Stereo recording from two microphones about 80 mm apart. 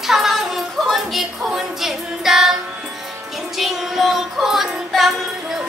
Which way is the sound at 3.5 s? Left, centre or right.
Centre.